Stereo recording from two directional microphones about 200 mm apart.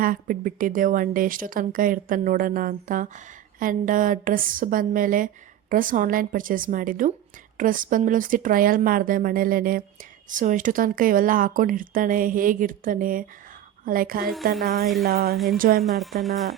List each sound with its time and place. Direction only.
0.0 s speech: 45° right (ahead or behind)
15.8 s speech: centre (ahead or behind)